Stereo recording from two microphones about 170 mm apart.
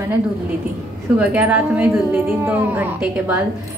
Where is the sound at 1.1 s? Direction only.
10° right (ahead or behind).